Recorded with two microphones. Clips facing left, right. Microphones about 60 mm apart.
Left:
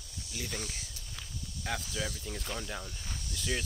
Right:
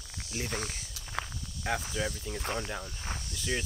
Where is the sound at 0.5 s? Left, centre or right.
Right.